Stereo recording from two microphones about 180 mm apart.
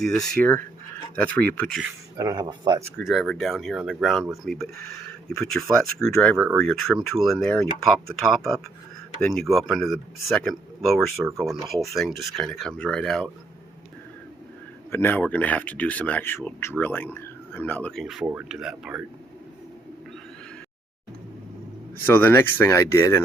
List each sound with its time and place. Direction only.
0.0 s speech: 5° left (ahead or behind)
2.1 s speech: 20° right (ahead or behind)
3.0 s speech: centre (ahead or behind)
6.3 s speech: 15° right (ahead or behind)
6.6 s speech: centre (ahead or behind)
14.8 s speech: 10° left (ahead or behind); by 19.0 s 5° right (ahead or behind)
22.0 s speech: 10° left (ahead or behind)